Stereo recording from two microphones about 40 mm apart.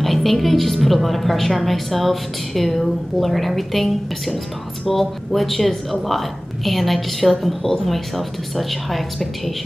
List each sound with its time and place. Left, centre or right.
0.0 s a woman's voice: centre